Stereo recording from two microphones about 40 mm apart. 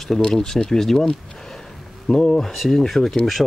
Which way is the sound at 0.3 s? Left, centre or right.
Centre.